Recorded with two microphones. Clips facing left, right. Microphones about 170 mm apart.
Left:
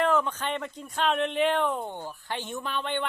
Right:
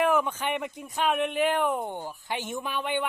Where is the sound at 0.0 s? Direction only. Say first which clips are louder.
Right 1 dB; 10° right (ahead or behind).